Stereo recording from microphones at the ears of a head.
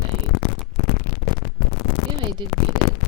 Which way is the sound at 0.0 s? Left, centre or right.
Left.